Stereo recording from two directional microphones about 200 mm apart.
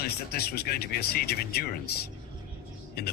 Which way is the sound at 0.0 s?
50° left (ahead or behind).